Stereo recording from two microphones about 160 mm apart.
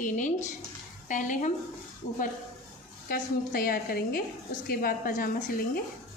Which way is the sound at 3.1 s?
65° left (ahead or behind).